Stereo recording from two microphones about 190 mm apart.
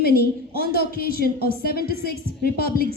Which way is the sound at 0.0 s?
55° left (ahead or behind).